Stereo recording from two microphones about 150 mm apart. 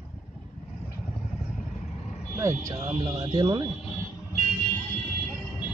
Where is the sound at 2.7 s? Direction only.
45° right (ahead or behind).